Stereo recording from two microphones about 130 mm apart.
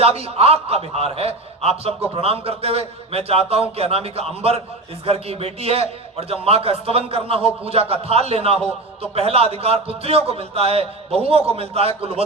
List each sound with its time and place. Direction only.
0.0 s a man's voice: 50° right (ahead or behind)